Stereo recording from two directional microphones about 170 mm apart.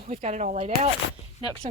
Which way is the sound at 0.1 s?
40° right (ahead or behind).